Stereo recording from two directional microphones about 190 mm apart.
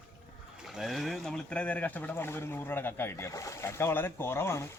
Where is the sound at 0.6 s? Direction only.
Centre (ahead or behind).